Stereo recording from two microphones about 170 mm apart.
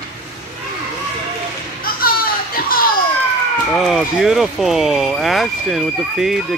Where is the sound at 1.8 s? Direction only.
60° left (ahead or behind).